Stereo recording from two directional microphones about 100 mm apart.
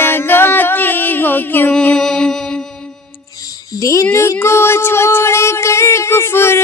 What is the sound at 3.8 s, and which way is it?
Speech, 30° left (ahead or behind).